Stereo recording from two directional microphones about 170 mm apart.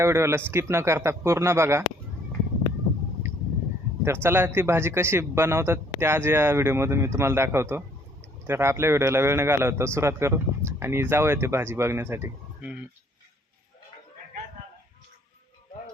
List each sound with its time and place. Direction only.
0.0 s a man's voice: 15° right (ahead or behind)
3.2 s a sound: 15° right (ahead or behind)
4.0 s a man's voice: 15° right (ahead or behind)